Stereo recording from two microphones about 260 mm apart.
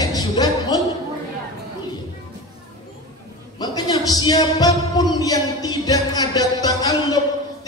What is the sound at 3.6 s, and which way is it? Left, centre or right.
A man's voice, centre.